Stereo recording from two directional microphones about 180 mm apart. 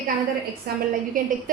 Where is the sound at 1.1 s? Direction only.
50° right (ahead or behind).